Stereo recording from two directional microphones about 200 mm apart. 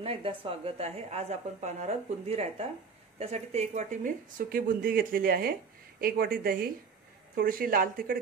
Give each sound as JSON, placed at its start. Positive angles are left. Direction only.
{"t": 0.0, "sound": "a woman's voice", "side_deg": -30}